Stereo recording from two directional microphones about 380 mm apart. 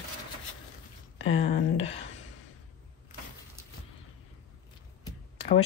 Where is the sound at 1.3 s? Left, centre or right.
Centre.